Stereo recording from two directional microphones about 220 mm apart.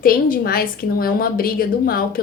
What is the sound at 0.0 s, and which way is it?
A woman's voice, 40° left (ahead or behind).